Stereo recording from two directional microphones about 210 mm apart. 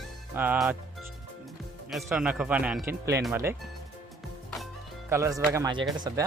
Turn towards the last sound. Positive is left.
turn(degrees=-20)  # may be behind; listen again after turning